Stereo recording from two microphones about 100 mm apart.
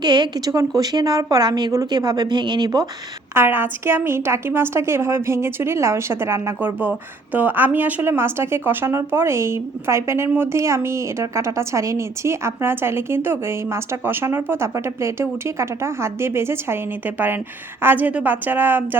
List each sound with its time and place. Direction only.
0.0 s a woman's voice: 45° right (ahead or behind)
3.3 s speech: 20° right (ahead or behind)